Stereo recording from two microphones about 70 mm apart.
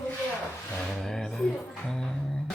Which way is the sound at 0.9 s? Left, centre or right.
Centre.